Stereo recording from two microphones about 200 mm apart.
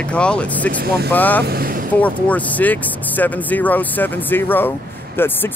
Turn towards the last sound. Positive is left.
turn(degrees=10)  # may be behind; listen again after turning